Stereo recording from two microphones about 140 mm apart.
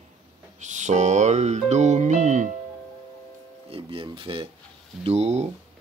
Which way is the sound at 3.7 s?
40° right (ahead or behind).